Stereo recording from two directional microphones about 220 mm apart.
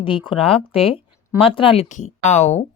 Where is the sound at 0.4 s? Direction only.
25° left (ahead or behind).